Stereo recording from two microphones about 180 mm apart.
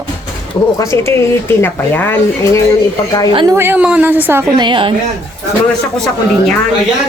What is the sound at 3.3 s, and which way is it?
A woman's voice, 20° right (ahead or behind).